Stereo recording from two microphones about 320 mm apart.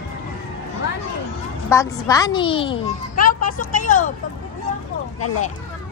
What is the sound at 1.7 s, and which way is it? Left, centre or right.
A child's voice, centre.